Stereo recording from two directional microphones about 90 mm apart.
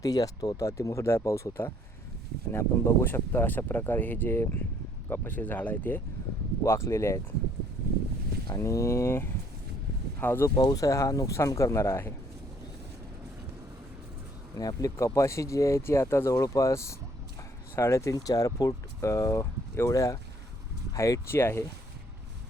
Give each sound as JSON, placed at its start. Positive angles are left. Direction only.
{"t": 0.0, "sound": "speech", "side_deg": 45}
{"t": 6.6, "sound": "speech", "side_deg": 30}
{"t": 8.5, "sound": "speech", "side_deg": 35}
{"t": 10.6, "sound": "speech", "side_deg": 45}
{"t": 14.5, "sound": "speech", "side_deg": 40}